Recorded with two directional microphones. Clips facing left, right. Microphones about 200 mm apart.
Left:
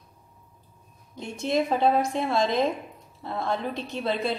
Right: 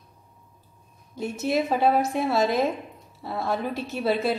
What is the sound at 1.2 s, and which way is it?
A woman's voice, 5° right (ahead or behind).